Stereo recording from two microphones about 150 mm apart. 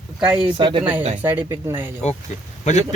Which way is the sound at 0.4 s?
35° right (ahead or behind).